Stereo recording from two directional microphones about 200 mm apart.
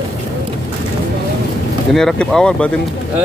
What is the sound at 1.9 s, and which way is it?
Speech, centre (ahead or behind).